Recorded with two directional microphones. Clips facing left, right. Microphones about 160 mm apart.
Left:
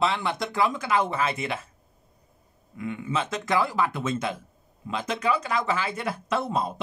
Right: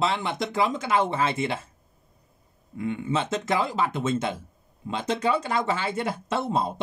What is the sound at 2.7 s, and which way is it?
Speech, 30° right (ahead or behind).